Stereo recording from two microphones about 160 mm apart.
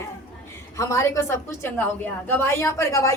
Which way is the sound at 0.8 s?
20° left (ahead or behind).